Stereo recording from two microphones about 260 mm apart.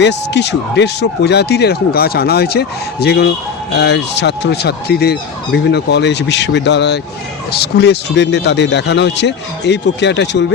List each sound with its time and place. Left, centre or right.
0.0 s speech: left